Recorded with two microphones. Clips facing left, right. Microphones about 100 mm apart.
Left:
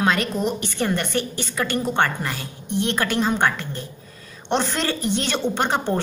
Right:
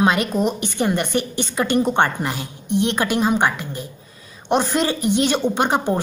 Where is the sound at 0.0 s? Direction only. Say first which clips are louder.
Right 3 dB; 15° right (ahead or behind).